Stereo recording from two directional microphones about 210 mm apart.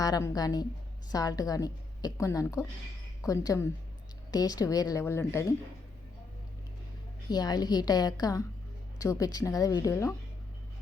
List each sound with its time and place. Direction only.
0.0 s a woman's voice: 15° left (ahead or behind)
7.3 s a woman's voice: 20° left (ahead or behind)